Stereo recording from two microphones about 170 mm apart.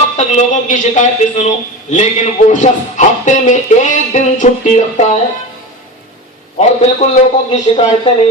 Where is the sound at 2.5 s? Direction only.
45° left (ahead or behind).